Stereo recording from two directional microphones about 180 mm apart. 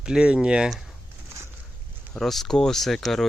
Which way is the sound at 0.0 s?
5° right (ahead or behind).